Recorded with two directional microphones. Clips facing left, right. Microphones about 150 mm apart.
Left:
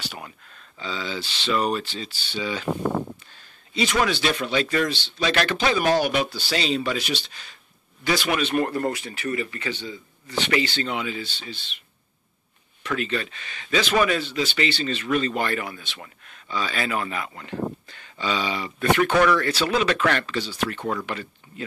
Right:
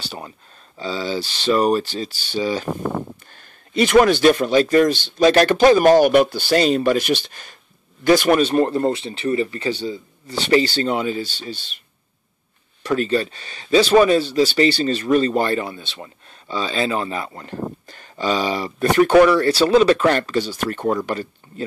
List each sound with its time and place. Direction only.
0.0 s speech: 30° right (ahead or behind)
3.3 s speech: 55° right (ahead or behind)
12.8 s speech: 35° right (ahead or behind)